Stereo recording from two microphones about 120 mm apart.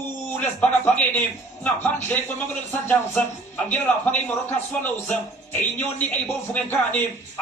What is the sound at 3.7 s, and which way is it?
Speech, 15° left (ahead or behind).